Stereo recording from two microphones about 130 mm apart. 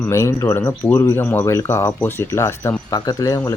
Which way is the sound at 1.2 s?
15° left (ahead or behind).